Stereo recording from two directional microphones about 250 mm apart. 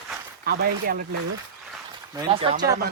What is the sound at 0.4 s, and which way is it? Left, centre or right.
Speech, right.